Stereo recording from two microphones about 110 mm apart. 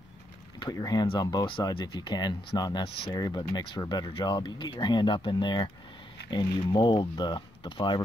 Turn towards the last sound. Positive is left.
turn(degrees=45)  # may be behind; listen again after turning